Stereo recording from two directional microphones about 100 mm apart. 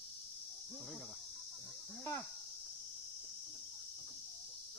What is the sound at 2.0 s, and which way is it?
Speech, 30° left (ahead or behind).